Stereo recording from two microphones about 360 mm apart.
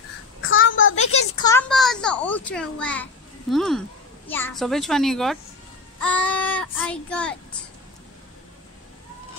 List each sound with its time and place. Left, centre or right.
0.4 s child singing: left
0.9 s a sound: centre
4.3 s a child's voice: centre